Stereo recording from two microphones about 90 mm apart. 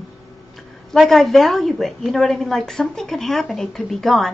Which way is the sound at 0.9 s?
Centre (ahead or behind).